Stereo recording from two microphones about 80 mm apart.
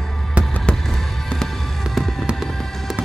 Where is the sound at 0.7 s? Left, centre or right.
Centre.